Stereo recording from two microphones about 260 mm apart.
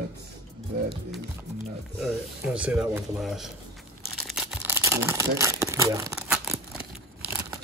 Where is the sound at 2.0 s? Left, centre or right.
Centre.